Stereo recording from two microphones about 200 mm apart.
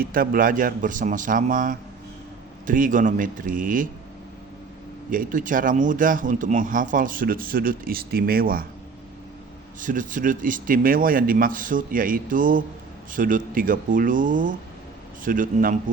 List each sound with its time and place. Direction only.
0.0 s a man's voice: 45° right (ahead or behind)
5.1 s speech: 40° right (ahead or behind)
9.8 s speech: 40° right (ahead or behind)